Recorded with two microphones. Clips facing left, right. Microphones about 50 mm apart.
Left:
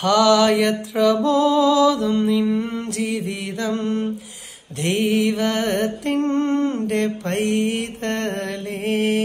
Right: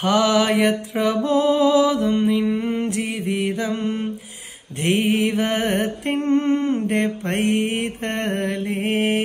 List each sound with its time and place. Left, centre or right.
0.0 s mantra: right